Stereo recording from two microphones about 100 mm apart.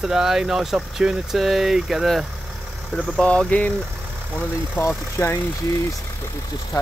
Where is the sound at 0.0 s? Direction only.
5° right (ahead or behind).